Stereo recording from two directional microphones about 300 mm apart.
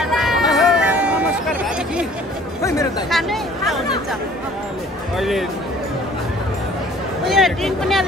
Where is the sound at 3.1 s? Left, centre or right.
Centre.